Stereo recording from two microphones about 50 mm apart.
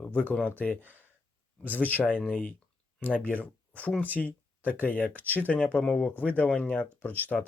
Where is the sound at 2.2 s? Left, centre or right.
Left.